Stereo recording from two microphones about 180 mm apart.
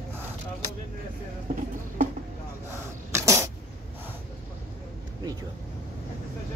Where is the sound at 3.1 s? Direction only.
15° right (ahead or behind).